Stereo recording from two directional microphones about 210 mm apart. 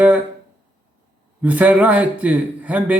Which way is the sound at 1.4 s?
5° right (ahead or behind).